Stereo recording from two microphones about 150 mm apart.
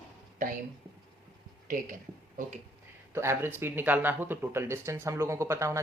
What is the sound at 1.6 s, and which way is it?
Speech, 65° right (ahead or behind).